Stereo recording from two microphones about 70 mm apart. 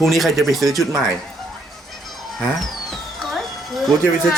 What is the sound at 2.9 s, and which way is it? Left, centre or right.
Music, centre.